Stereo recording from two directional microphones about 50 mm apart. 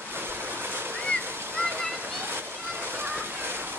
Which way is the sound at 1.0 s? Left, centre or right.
Left.